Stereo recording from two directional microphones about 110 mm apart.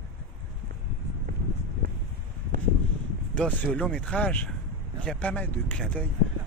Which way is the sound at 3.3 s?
10° left (ahead or behind).